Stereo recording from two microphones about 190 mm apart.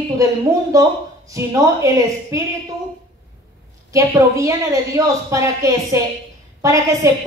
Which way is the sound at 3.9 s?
15° right (ahead or behind).